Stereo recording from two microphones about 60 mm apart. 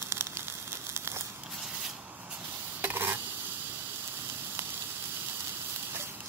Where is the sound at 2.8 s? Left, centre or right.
Right.